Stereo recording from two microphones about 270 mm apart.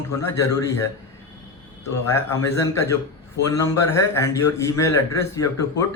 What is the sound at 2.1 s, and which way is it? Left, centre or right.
A man's voice, centre.